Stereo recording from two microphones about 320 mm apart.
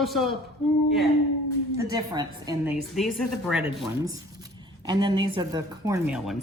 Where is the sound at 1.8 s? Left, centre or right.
Centre.